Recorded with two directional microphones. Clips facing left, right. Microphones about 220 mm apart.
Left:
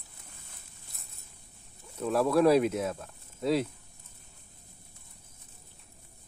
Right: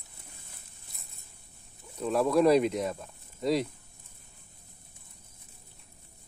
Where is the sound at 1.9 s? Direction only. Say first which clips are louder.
Even; centre (ahead or behind).